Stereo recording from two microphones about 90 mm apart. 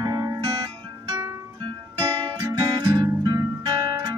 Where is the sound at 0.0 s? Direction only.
40° right (ahead or behind).